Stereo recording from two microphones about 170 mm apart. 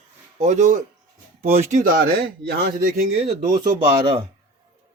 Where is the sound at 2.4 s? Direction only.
65° right (ahead or behind).